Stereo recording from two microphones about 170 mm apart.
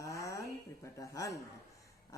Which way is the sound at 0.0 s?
20° left (ahead or behind).